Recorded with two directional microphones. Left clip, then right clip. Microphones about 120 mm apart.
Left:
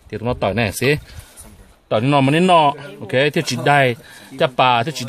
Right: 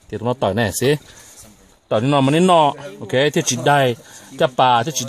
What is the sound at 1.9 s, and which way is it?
Speech, 90° right.